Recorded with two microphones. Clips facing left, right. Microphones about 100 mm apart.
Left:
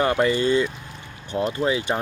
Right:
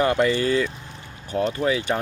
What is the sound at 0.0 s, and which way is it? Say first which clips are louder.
Speech: even; 30° left (ahead or behind).